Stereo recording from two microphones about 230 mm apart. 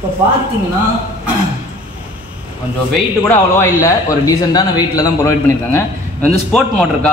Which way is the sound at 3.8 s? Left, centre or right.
Centre.